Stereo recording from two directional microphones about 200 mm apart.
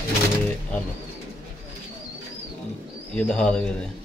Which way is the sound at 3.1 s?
5° left (ahead or behind).